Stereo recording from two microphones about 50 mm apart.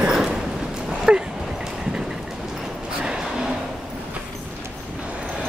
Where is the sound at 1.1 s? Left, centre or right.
Centre.